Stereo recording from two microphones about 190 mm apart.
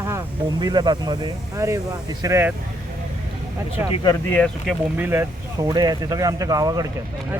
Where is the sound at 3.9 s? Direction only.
25° left (ahead or behind).